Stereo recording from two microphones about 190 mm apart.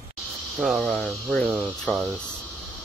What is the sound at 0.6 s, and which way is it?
Speech, centre (ahead or behind).